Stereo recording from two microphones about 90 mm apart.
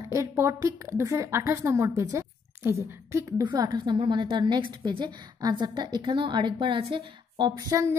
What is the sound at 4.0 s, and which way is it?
A woman's voice, 65° right (ahead or behind).